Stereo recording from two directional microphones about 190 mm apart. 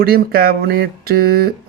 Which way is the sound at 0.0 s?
50° right (ahead or behind).